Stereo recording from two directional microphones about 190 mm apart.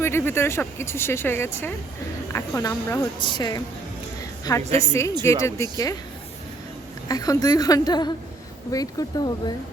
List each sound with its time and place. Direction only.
0.0 s a woman's voice: 15° left (ahead or behind)
4.8 s a woman's voice: 15° left (ahead or behind)
7.1 s a woman's voice: 20° left (ahead or behind)